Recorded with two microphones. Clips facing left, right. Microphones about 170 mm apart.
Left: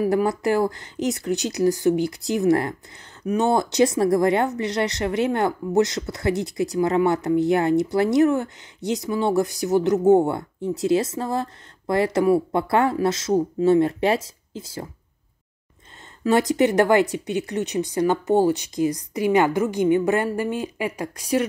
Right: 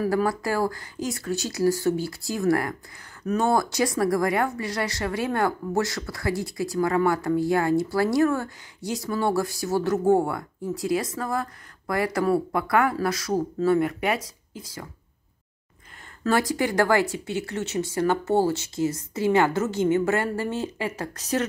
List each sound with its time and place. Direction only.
0.0 s speech: 20° left (ahead or behind)
16.3 s speech: 20° left (ahead or behind)